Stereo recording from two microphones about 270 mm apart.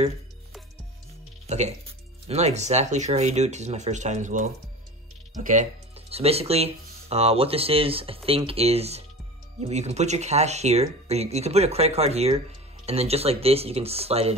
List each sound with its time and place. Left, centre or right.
1.5 s speech: right